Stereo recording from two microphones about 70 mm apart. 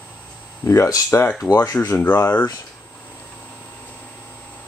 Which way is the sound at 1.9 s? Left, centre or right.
Left.